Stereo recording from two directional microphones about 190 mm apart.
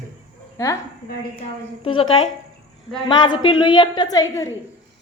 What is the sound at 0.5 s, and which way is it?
Speech, 15° left (ahead or behind).